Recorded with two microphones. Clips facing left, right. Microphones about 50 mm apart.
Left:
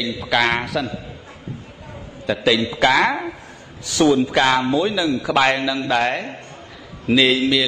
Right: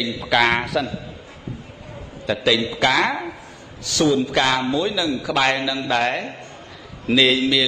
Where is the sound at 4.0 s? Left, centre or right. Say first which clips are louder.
Left 3 dB; left.